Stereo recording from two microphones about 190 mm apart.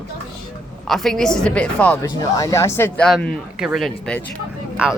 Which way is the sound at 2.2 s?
20° left (ahead or behind).